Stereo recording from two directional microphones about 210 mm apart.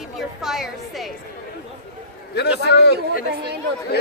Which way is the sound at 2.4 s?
50° left (ahead or behind).